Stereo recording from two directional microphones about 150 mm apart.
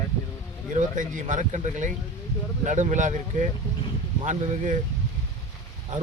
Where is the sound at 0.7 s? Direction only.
55° right (ahead or behind).